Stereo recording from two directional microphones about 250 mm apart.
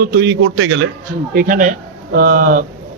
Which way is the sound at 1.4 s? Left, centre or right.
Right.